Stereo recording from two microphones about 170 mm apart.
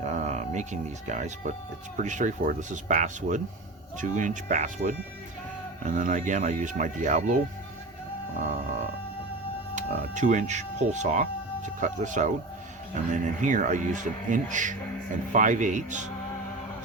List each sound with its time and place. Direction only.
0.0 s speech: 45° right (ahead or behind)
9.7 s speech: 45° right (ahead or behind)